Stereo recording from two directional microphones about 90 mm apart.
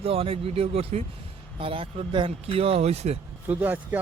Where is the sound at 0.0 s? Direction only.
90° right.